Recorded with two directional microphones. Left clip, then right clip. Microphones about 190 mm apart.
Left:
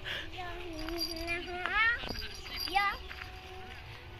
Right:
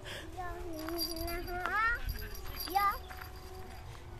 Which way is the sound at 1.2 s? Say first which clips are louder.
Left 2 dB; 5° left (ahead or behind).